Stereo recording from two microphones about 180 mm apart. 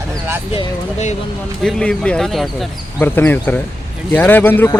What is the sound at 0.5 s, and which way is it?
Speech, 40° left (ahead or behind).